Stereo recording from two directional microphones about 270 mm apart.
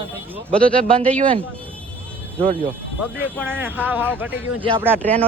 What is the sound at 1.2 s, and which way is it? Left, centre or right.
Speech, centre.